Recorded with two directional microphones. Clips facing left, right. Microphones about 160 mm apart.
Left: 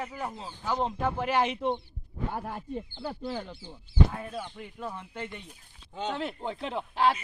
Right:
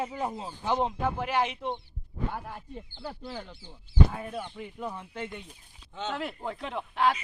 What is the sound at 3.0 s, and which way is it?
Speech, 60° left (ahead or behind).